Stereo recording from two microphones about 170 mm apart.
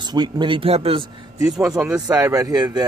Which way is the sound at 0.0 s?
25° right (ahead or behind).